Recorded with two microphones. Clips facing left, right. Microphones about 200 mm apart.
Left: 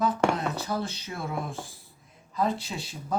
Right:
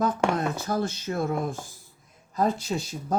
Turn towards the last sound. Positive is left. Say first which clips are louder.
# right 4 dB
turn(degrees=-45)  # may be behind; listen again after turning